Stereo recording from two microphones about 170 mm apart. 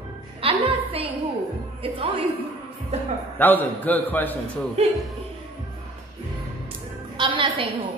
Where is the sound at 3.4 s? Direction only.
10° left (ahead or behind).